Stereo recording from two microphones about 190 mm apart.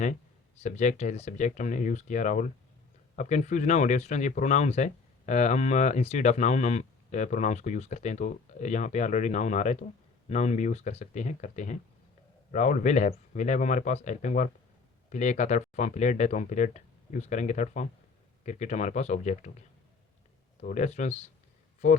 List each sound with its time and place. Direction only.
0.6 s speech: 40° left (ahead or behind)
20.6 s speech: 35° left (ahead or behind)